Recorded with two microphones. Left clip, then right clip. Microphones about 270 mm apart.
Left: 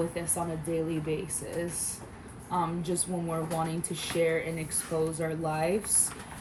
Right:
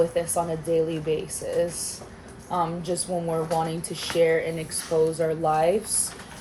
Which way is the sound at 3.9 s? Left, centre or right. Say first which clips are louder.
Right 7 dB; centre.